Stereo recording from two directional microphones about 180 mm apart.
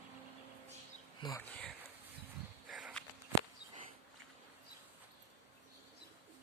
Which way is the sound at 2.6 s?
Centre (ahead or behind).